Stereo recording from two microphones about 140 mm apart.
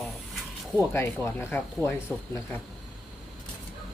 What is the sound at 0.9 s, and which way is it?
Speech, 20° left (ahead or behind).